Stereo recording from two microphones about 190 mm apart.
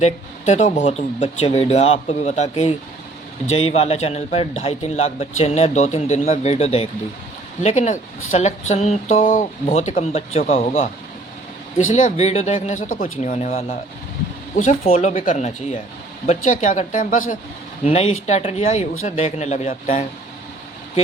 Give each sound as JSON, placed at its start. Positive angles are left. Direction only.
{"t": 0.0, "sound": "a man's voice", "side_deg": 35}
{"t": 11.9, "sound": "a man's voice", "side_deg": 40}
{"t": 17.8, "sound": "a man's voice", "side_deg": 35}